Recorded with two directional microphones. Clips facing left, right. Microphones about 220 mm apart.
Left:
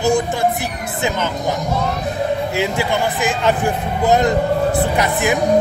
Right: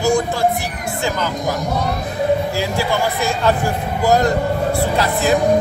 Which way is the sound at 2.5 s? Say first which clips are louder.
Left 1 dB; 20° left (ahead or behind).